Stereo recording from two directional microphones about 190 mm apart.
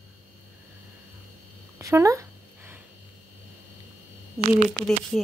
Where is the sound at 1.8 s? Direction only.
15° right (ahead or behind).